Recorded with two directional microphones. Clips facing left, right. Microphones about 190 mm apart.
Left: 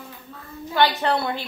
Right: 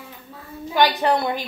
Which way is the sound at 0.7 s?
15° right (ahead or behind).